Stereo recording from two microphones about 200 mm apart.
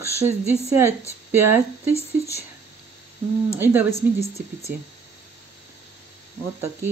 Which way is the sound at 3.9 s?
35° left (ahead or behind).